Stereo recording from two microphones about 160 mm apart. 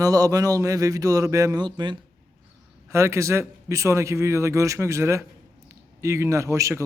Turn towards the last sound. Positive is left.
turn(degrees=-15)  # may be behind; listen again after turning